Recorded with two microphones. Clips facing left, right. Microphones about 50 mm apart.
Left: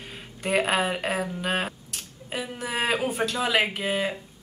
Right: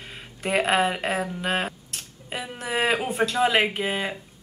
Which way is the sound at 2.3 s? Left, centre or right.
Centre.